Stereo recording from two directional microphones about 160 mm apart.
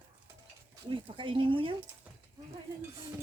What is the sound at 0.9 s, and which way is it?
Speech, 35° right (ahead or behind).